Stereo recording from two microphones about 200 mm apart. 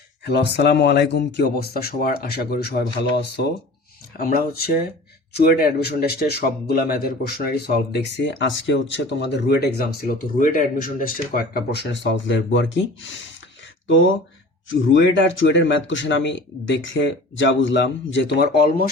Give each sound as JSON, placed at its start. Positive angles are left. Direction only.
{"t": 0.3, "sound": "speech", "side_deg": 55}
{"t": 5.8, "sound": "speech", "side_deg": 50}
{"t": 13.8, "sound": "speech", "side_deg": 70}